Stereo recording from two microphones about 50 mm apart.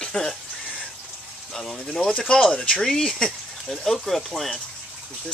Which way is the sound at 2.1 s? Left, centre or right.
Left.